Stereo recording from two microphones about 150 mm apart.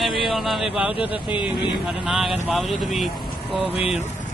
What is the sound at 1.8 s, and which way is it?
A man's voice, centre (ahead or behind).